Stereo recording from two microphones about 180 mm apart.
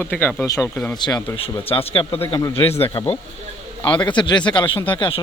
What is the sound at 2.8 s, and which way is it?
A man's voice, 35° left (ahead or behind).